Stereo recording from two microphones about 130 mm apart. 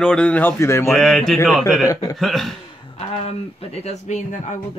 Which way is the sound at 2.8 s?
50° left (ahead or behind).